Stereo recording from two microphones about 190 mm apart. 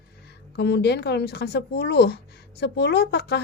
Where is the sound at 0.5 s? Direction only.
60° left (ahead or behind).